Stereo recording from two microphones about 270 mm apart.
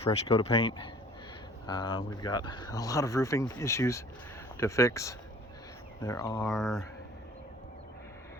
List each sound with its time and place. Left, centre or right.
0.0 s speech: left
6.5 s speech: centre